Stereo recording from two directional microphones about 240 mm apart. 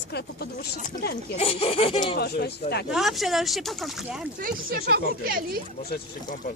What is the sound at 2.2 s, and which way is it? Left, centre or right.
Speech, left.